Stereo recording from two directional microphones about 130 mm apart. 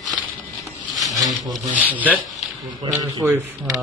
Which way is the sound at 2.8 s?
30° right (ahead or behind).